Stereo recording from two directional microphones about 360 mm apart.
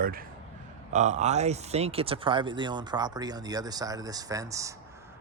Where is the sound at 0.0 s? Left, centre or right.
Right.